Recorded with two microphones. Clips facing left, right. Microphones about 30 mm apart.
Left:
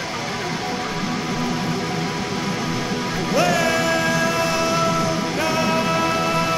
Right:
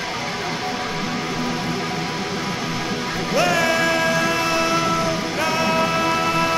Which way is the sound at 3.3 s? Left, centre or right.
Centre.